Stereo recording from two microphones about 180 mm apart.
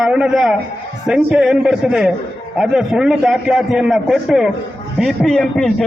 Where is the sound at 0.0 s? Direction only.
5° right (ahead or behind).